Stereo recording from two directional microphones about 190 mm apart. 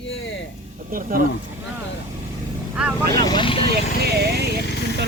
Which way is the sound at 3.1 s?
20° left (ahead or behind).